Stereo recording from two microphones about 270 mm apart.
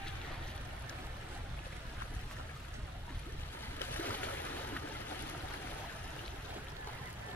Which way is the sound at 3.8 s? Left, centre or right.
Centre.